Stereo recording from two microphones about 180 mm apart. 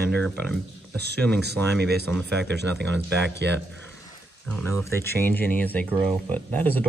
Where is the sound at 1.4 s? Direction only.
65° right (ahead or behind).